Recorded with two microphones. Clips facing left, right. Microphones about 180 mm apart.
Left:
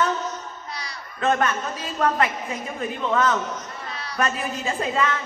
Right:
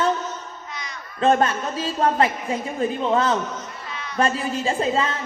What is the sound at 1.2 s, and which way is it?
A woman's voice, 30° right (ahead or behind).